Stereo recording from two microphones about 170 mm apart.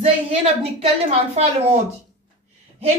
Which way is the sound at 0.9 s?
40° right (ahead or behind).